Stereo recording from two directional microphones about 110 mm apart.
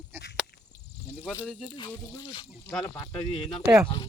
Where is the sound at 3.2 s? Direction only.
65° left (ahead or behind).